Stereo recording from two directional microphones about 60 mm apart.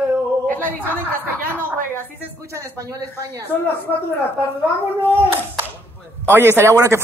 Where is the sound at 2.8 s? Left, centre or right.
Right.